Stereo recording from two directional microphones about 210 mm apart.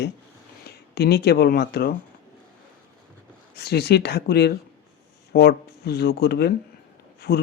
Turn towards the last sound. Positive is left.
turn(degrees=50)  # may be behind; listen again after turning